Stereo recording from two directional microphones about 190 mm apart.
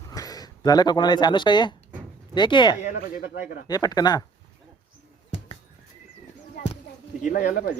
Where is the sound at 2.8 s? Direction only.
45° left (ahead or behind).